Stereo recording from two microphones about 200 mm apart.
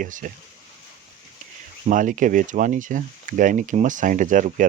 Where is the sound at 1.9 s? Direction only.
40° right (ahead or behind).